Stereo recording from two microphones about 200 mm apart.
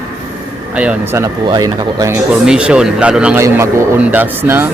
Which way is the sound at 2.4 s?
5° right (ahead or behind).